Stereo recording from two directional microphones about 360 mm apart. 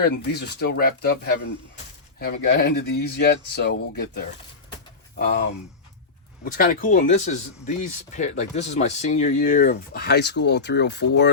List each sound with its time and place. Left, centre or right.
0.0 s speech: left
6.4 s speech: left